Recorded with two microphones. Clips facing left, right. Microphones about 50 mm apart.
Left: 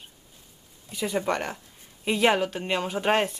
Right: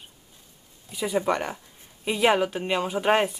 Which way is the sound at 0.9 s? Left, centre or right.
Centre.